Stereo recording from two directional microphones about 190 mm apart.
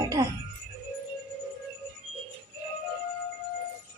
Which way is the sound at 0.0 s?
20° right (ahead or behind).